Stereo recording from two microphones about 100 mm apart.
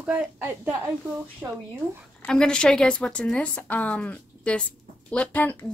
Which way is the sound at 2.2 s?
10° left (ahead or behind).